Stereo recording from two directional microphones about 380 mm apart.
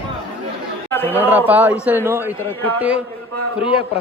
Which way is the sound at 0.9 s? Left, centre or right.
Centre.